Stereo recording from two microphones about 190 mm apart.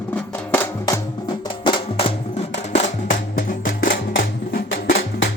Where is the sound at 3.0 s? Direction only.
45° left (ahead or behind).